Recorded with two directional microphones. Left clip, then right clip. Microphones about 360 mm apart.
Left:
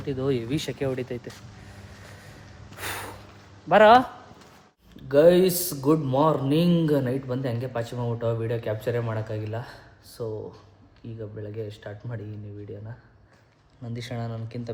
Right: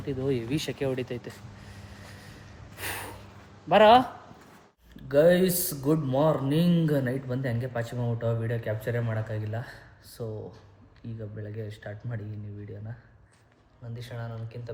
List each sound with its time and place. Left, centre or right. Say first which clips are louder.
0.0 s speech: left 3 dB; centre
2.7 s snort: left 2 dB; centre
3.7 s speech: left 2 dB; centre
5.0 s speech: left 4 dB; centre
13.9 s speech: left 6 dB; centre